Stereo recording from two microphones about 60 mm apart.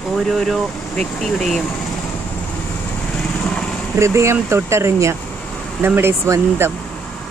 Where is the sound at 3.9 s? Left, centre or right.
Right.